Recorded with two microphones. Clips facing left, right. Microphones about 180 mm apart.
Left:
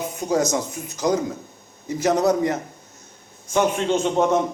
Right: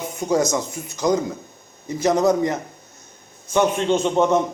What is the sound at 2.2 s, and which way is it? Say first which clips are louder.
Speech: right 1 dB; 15° right (ahead or behind).